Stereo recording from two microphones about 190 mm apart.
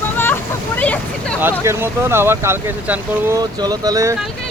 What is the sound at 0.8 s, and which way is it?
Speech, 10° left (ahead or behind).